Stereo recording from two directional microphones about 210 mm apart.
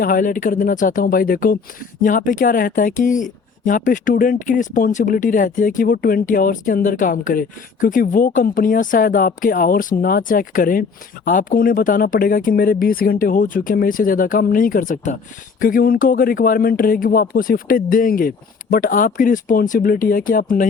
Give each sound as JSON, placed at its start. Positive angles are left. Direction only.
{"t": 0.0, "sound": "speech", "side_deg": 40}